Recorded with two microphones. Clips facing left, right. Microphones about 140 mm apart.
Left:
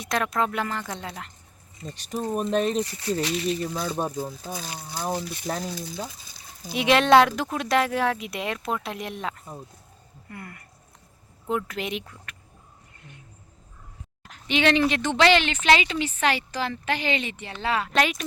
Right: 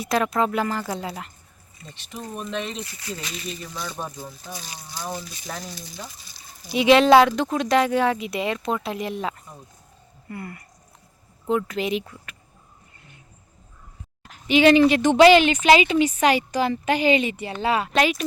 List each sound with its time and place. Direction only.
0.0 s speech: 5° right (ahead or behind)
1.9 s speech: 40° left (ahead or behind)
4.2 s speech: 55° left (ahead or behind)
6.7 s speech: centre (ahead or behind)
14.3 s speech: 5° right (ahead or behind)
17.9 s speech: centre (ahead or behind)